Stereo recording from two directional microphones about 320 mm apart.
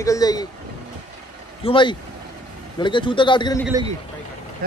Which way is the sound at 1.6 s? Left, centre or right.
Centre.